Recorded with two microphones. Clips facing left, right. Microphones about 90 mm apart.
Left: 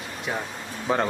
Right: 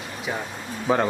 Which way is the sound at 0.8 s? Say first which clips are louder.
Right 3 dB; 5° right (ahead or behind).